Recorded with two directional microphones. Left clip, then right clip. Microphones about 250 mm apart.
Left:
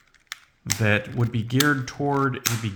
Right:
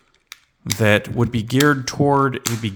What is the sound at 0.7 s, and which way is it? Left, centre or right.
Speech, right.